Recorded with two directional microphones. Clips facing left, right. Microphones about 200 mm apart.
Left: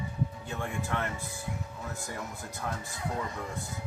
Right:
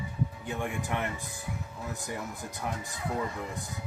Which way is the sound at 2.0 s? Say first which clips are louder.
Right 2 dB; 15° right (ahead or behind).